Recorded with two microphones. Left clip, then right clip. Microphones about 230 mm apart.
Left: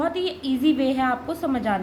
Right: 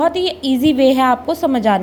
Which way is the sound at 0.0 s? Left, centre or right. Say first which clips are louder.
Right 9 dB; right.